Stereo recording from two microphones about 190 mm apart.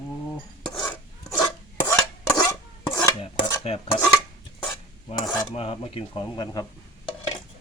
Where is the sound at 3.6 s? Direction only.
30° left (ahead or behind).